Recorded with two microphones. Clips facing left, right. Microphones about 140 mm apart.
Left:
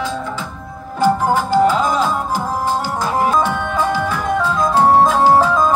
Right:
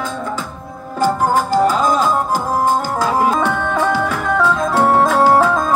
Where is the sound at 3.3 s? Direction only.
65° right (ahead or behind).